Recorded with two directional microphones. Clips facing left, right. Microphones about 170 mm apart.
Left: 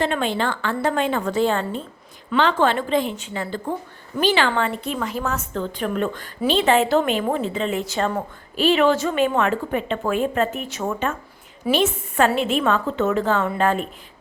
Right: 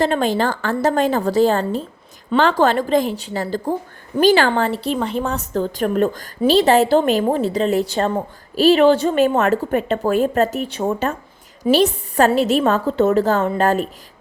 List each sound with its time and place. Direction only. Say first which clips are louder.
0.0 s a woman's voice: right 4 dB; 40° right (ahead or behind)